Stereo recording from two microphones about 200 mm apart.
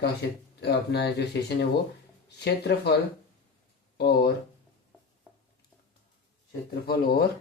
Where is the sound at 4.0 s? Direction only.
55° left (ahead or behind).